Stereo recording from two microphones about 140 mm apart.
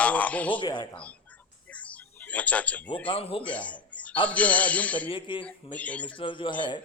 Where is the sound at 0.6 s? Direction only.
30° left (ahead or behind).